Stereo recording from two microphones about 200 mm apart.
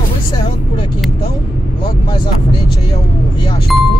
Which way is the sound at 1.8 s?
25° left (ahead or behind).